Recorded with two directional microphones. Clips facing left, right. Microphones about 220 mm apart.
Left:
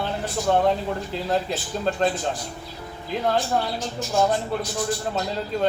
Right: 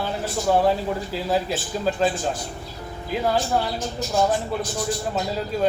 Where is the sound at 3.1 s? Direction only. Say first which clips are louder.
Right 1 dB; 5° right (ahead or behind).